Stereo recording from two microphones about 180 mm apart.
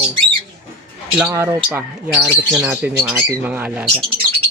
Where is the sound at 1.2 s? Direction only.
10° right (ahead or behind).